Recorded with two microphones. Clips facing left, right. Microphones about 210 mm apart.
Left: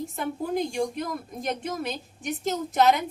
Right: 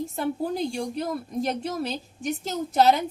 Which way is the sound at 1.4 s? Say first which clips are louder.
Left 2 dB; 35° right (ahead or behind).